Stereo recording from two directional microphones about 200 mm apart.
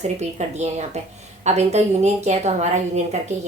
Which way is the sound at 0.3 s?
35° right (ahead or behind).